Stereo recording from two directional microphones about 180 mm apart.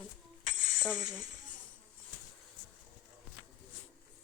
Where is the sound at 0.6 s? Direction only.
50° left (ahead or behind).